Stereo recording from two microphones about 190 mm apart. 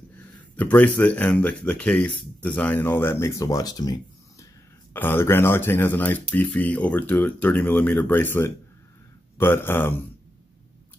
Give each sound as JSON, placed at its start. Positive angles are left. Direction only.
{"t": 0.6, "sound": "speech", "side_deg": 10}